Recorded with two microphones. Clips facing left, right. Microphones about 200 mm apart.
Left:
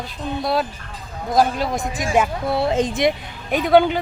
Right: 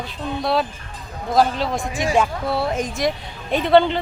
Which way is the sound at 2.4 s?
20° left (ahead or behind).